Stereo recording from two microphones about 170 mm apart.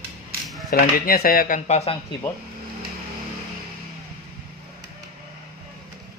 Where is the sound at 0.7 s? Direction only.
60° left (ahead or behind); by 2.0 s 40° left (ahead or behind).